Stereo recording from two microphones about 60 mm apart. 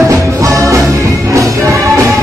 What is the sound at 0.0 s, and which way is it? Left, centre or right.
Music, right.